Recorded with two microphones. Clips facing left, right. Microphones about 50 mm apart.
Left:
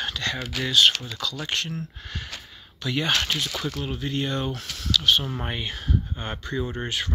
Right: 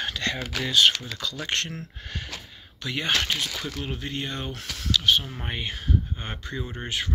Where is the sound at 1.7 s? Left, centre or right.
Right.